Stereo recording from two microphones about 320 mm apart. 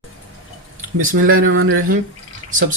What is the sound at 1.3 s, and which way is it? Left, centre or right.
Speech, right.